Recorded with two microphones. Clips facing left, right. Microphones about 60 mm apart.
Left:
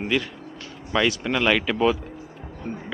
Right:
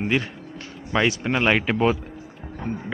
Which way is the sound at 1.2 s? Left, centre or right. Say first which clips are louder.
Right 1 dB; right.